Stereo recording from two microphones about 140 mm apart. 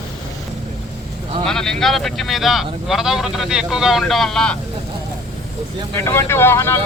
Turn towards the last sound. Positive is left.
turn(degrees=15)  # may be behind; listen again after turning